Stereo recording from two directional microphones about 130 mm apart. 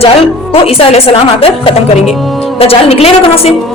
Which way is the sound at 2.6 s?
50° left (ahead or behind).